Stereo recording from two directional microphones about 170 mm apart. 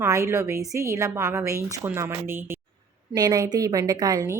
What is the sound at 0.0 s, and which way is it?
A woman's voice, 15° right (ahead or behind).